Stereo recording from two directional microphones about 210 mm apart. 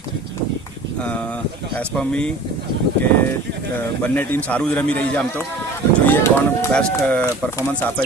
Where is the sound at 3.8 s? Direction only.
10° left (ahead or behind).